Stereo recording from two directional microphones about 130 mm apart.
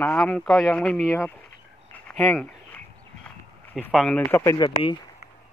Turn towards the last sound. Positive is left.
turn(degrees=35)  # may be behind; listen again after turning